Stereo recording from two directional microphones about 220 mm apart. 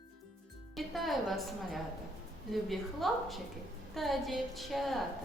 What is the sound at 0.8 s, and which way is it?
Speech, centre (ahead or behind).